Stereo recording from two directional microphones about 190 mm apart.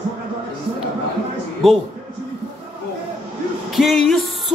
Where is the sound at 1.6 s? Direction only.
Centre (ahead or behind).